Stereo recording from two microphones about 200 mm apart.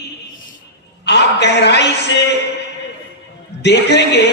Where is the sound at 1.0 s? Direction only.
60° left (ahead or behind).